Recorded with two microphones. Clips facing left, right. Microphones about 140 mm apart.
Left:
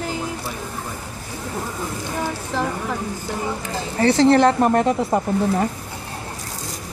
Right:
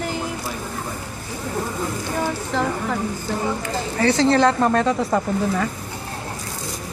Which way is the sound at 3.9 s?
25° left (ahead or behind).